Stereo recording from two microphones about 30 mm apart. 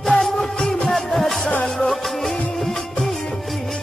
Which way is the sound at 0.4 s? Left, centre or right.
Centre.